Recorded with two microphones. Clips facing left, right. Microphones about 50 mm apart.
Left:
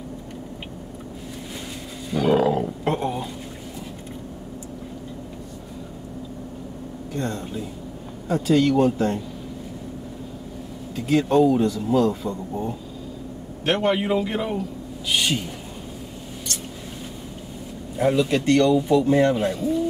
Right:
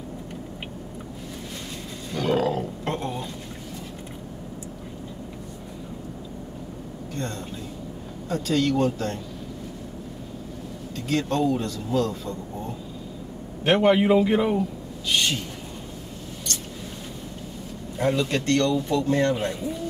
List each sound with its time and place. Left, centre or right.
2.0 s roaring cats: centre
2.8 s a sound: centre
7.2 s a sound: centre
8.3 s speech: centre
11.0 s speech: centre
13.7 s a man's voice: centre
15.0 s speech: centre
17.9 s speech: centre
19.4 s a man's voice: centre